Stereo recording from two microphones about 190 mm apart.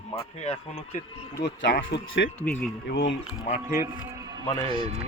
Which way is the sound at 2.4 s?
10° left (ahead or behind).